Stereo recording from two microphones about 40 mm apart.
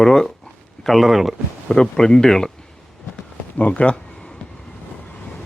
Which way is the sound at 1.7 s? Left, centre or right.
Centre.